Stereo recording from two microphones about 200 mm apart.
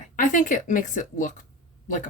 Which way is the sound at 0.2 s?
40° left (ahead or behind).